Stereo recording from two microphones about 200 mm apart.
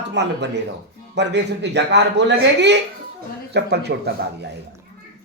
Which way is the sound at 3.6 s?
55° right (ahead or behind).